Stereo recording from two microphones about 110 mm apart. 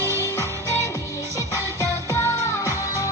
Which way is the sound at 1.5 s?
25° left (ahead or behind).